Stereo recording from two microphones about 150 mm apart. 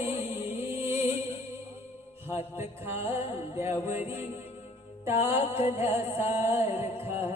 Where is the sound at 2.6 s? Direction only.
15° right (ahead or behind).